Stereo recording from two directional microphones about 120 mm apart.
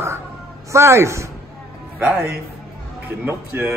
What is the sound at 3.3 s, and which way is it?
Music, 15° right (ahead or behind).